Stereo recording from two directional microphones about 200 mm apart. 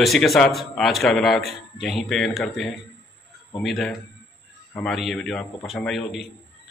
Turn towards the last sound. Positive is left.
turn(degrees=0)  # may be behind; listen again after turning